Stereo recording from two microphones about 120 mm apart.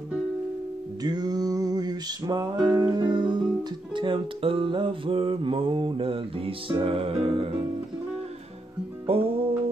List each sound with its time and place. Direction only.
1.0 s music: 35° right (ahead or behind); by 7.4 s 50° right (ahead or behind)
9.1 s music: 55° right (ahead or behind)